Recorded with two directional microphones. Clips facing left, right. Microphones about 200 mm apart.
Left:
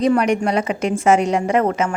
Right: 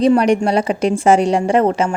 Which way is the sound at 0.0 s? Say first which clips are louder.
Right 4 dB; 30° right (ahead or behind).